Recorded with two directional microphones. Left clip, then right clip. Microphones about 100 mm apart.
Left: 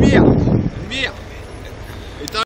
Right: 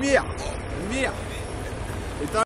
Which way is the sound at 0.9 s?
60° right (ahead or behind).